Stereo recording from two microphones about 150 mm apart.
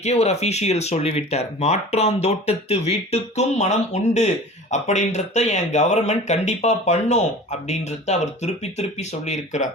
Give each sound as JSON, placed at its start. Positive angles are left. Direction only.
{"t": 0.0, "sound": "speech", "side_deg": 45}